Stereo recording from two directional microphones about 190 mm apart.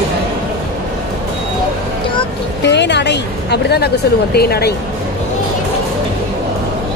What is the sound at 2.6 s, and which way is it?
A woman's voice, 65° left (ahead or behind).